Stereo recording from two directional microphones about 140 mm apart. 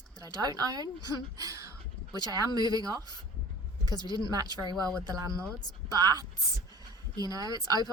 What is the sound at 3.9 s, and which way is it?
Speech, 30° left (ahead or behind).